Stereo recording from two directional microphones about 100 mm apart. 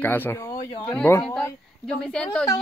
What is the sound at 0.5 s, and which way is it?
Speech, 45° left (ahead or behind).